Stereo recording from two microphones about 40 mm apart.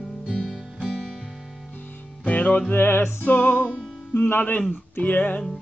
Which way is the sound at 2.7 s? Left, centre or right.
Left.